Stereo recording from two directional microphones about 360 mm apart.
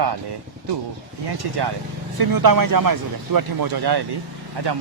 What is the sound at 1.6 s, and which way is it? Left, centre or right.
Speech, right.